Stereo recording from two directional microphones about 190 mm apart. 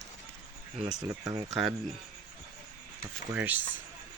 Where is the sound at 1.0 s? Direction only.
15° right (ahead or behind).